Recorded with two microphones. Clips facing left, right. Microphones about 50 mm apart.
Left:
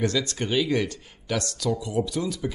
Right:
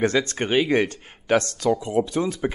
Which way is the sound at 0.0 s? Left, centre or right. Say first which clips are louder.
Right 4 dB; right.